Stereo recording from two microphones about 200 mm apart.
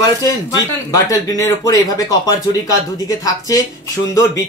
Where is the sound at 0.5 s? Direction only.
20° left (ahead or behind).